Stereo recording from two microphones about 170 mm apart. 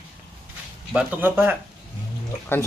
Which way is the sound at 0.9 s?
10° right (ahead or behind).